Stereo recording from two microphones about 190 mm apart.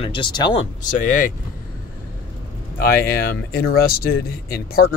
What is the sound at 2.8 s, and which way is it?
Speech, 50° left (ahead or behind).